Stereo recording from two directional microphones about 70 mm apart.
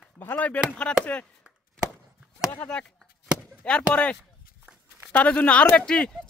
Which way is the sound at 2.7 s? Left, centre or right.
Centre.